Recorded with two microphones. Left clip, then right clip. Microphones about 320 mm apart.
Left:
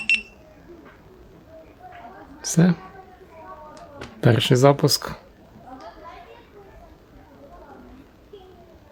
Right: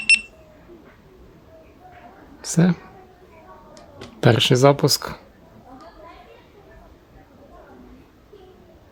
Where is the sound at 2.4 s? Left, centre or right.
Centre.